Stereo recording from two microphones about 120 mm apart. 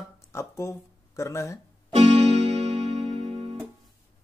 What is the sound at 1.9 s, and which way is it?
Music, 60° right (ahead or behind).